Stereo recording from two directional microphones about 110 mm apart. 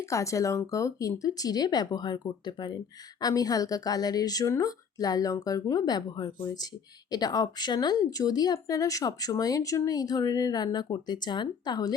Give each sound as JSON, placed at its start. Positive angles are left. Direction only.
{"t": 0.1, "sound": "speech", "side_deg": 30}